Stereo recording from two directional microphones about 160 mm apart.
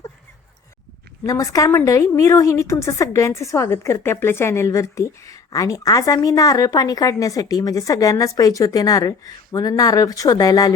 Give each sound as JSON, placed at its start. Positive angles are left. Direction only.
{"t": 1.2, "sound": "a woman's voice", "side_deg": 20}